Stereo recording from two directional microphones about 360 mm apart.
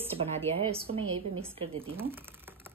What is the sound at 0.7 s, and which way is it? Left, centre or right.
A woman's voice, centre.